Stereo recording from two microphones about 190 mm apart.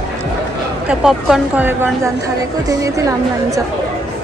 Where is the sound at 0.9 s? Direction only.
Centre (ahead or behind); by 3.5 s 15° right (ahead or behind).